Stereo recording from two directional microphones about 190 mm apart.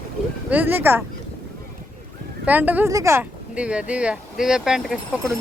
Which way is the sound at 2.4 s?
10° right (ahead or behind).